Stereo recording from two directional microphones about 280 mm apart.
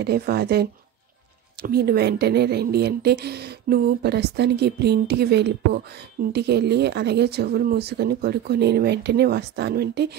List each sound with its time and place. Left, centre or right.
0.0 s a woman's voice: right